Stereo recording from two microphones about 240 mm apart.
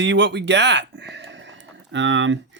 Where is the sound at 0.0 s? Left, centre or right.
Right.